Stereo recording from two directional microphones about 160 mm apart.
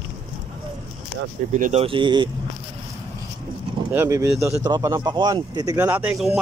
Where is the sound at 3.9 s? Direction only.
20° right (ahead or behind).